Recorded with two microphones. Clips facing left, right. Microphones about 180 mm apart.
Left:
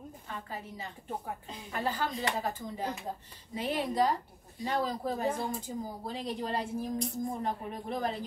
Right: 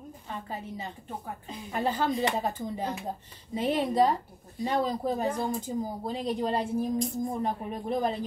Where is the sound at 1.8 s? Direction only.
20° right (ahead or behind).